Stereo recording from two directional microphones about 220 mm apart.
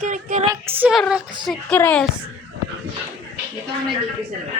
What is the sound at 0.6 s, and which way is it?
Speech, 10° right (ahead or behind).